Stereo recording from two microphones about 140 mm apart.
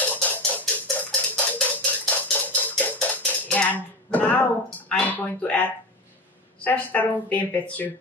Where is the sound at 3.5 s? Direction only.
10° left (ahead or behind).